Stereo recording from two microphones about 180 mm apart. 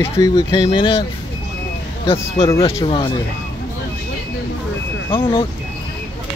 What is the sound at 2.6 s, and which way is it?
Speech, 35° left (ahead or behind).